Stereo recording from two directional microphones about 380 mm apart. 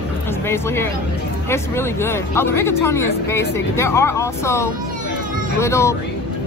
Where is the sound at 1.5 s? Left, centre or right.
Centre.